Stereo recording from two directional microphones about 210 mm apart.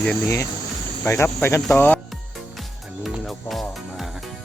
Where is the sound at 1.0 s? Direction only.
10° left (ahead or behind).